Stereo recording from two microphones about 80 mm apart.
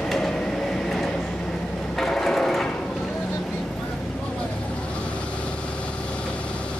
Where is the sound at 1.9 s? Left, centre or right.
Centre.